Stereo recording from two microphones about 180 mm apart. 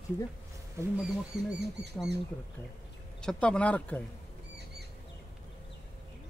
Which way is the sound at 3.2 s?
5° left (ahead or behind).